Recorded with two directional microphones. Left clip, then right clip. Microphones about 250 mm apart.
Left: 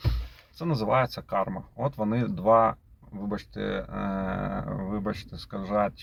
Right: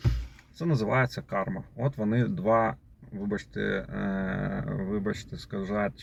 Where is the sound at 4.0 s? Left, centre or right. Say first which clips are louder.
Left 2 dB; left.